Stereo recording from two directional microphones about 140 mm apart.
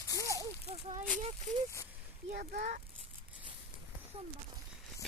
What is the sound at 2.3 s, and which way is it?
Speech, 80° right.